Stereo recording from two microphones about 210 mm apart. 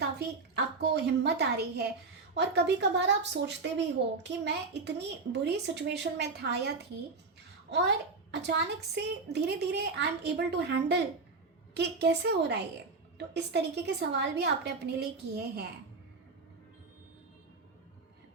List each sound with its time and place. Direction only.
0.2 s a child's voice: 50° right (ahead or behind)
7.7 s a child's voice: 55° right (ahead or behind)